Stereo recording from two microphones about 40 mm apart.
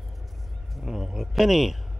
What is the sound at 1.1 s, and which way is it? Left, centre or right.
Speech, centre.